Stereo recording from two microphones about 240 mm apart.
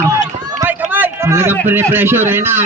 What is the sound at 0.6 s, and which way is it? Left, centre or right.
Run, centre.